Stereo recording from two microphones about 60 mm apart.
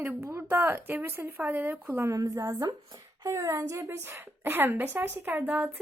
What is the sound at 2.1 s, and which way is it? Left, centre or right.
Speech, right.